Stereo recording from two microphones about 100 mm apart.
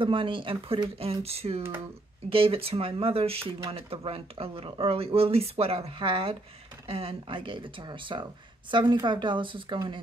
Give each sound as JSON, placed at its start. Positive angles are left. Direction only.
{"t": 0.0, "sound": "speech", "side_deg": -60}
{"t": 0.9, "sound": "speech", "side_deg": -80}
{"t": 2.2, "sound": "speech", "side_deg": -65}